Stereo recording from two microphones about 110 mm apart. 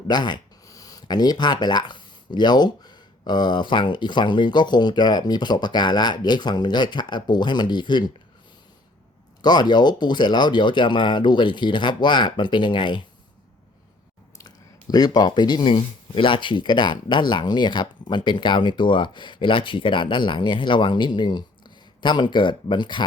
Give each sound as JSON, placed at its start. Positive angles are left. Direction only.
{"t": 0.1, "sound": "speech", "side_deg": 40}
{"t": 9.4, "sound": "speech", "side_deg": 40}
{"t": 14.3, "sound": "speech", "side_deg": 35}